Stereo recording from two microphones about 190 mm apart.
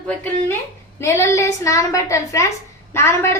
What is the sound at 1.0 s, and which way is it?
A woman's voice, 15° left (ahead or behind).